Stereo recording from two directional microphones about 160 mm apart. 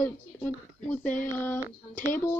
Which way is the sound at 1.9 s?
55° left (ahead or behind).